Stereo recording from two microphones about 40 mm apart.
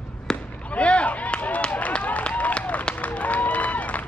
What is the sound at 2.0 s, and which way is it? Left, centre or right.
Applause, left.